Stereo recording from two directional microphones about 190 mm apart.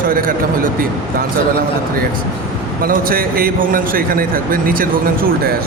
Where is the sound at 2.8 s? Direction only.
50° right (ahead or behind).